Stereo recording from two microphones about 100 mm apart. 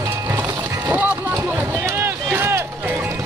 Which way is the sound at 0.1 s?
25° right (ahead or behind).